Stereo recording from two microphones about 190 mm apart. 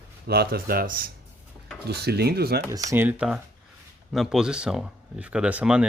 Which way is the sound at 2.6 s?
15° right (ahead or behind).